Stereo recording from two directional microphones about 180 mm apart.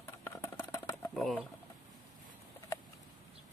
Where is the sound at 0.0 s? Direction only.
15° left (ahead or behind).